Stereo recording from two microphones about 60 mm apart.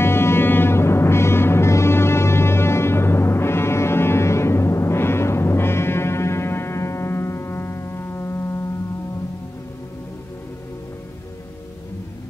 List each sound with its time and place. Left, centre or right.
0.0 s music: left